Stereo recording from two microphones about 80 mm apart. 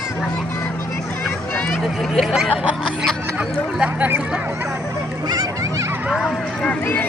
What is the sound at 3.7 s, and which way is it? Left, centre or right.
Speech, centre.